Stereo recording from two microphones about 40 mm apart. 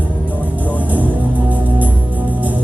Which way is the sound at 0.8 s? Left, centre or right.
Right.